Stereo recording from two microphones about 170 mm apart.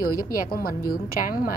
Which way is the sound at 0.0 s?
60° left (ahead or behind).